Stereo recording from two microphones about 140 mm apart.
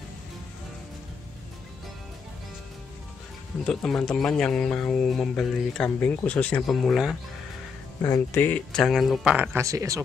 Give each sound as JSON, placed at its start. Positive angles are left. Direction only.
{"t": 3.6, "sound": "speech", "side_deg": 5}
{"t": 8.0, "sound": "speech", "side_deg": 20}
{"t": 9.6, "sound": "speech", "side_deg": -20}